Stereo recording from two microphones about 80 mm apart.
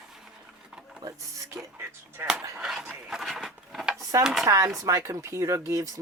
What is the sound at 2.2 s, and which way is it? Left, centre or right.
Speech, right.